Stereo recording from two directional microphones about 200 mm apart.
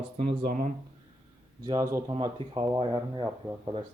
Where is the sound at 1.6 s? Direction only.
15° right (ahead or behind).